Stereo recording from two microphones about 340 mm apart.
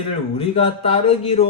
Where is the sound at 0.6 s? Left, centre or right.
Centre.